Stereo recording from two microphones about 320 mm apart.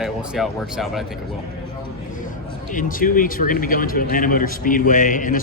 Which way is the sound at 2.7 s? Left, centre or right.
Left.